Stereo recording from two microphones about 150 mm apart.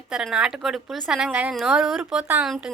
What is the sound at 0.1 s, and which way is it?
Speech, 5° right (ahead or behind).